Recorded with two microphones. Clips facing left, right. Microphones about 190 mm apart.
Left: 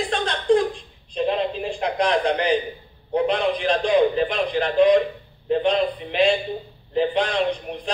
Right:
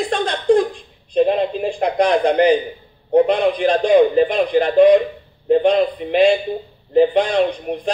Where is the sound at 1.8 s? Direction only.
50° right (ahead or behind).